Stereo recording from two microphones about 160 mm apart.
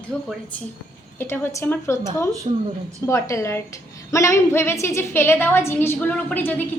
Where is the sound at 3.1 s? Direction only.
20° left (ahead or behind).